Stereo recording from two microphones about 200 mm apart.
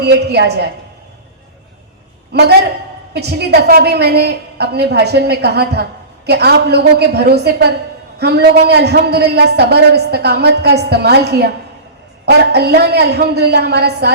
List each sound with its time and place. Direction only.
0.0 s a man's voice: 55° right (ahead or behind)
3.1 s a man's voice: 55° right (ahead or behind)